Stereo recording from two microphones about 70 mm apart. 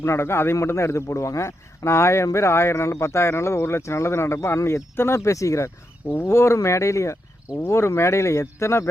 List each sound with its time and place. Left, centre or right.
0.0 s speech: left